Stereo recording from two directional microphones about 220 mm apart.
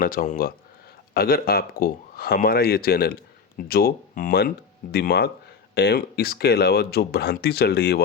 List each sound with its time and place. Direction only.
0.0 s speech: 40° left (ahead or behind)